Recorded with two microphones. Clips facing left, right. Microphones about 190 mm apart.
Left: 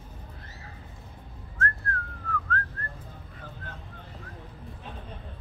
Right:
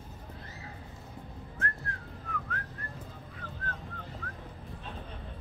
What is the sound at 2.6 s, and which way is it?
Whistling, 15° right (ahead or behind).